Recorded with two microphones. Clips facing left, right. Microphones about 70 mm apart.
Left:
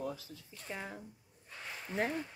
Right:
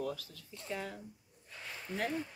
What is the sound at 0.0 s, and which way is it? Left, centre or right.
Speech, left.